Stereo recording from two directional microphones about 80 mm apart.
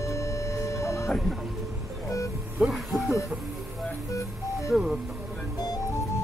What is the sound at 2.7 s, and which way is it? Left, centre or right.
Music, centre.